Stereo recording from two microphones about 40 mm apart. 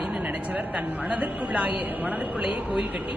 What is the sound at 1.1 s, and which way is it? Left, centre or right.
A woman's voice, right.